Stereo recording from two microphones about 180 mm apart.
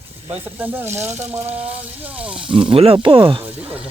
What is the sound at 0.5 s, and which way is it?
Speech, 10° right (ahead or behind).